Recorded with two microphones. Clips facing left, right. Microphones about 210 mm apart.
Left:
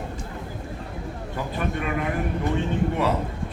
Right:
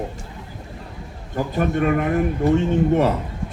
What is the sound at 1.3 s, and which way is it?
Speech, 45° right (ahead or behind).